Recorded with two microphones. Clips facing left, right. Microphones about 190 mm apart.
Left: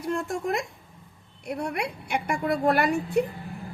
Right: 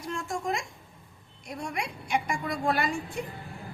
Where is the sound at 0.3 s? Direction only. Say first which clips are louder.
Left 3 dB; 60° left (ahead or behind).